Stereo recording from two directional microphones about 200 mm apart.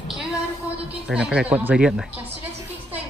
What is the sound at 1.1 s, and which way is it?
Speech, 5° right (ahead or behind).